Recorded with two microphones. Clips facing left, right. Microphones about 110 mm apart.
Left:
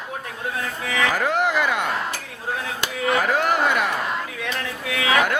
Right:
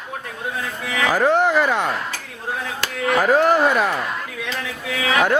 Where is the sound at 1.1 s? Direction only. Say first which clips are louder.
Right 8 dB; 35° right (ahead or behind).